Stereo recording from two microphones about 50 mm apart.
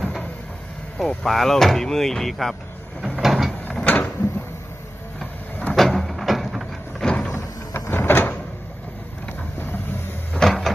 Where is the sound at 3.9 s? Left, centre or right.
Left.